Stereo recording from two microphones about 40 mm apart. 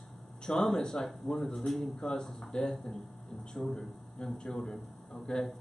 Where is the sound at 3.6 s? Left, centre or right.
Centre.